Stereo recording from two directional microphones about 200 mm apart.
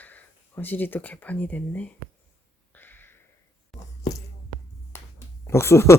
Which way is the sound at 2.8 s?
10° left (ahead or behind).